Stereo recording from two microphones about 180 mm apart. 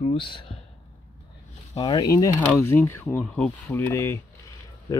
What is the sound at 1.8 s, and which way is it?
Speech, 25° left (ahead or behind).